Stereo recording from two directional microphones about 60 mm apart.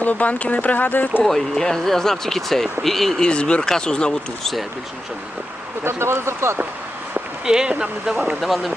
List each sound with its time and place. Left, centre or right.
0.0 s speech: left
1.2 s speech: centre
3.2 s speech: centre
5.8 s speech: right
7.4 s speech: centre
8.4 s speech: centre